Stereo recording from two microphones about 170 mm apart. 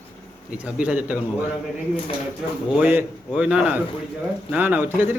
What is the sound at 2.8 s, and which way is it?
A man's voice, 10° right (ahead or behind).